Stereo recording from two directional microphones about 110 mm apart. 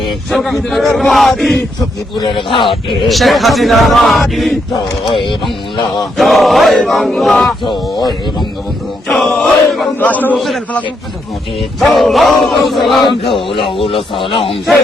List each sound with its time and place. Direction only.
0.3 s speech: centre (ahead or behind)
2.1 s speech: 50° left (ahead or behind)
3.1 s speech: centre (ahead or behind)
5.1 s speech: 50° left (ahead or behind)
6.1 s speech: centre (ahead or behind)
7.6 s speech: 45° left (ahead or behind)
9.0 s chant: 5° left (ahead or behind)
10.0 s a man's voice: 15° left (ahead or behind)
10.3 s speech: centre (ahead or behind)
11.8 s speech: centre (ahead or behind)
13.5 s a man's voice: 50° left (ahead or behind)